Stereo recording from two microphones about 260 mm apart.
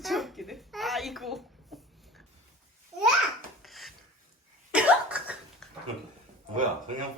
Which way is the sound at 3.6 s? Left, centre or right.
Centre.